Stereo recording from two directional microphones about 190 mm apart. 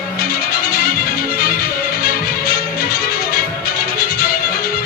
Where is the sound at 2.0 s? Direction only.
50° left (ahead or behind).